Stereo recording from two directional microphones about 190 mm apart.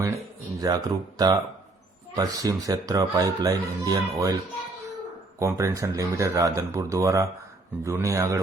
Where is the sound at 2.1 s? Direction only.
20° right (ahead or behind).